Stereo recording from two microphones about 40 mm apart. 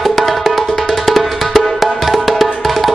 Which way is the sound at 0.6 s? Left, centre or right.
Centre.